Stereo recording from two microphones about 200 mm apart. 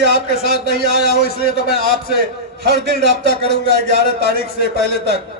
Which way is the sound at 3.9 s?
50° left (ahead or behind).